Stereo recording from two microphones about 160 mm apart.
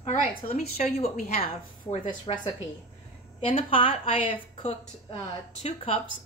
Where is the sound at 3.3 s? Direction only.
35° left (ahead or behind).